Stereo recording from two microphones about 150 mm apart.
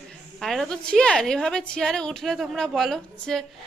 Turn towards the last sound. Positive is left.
turn(degrees=0)  # may be behind; listen again after turning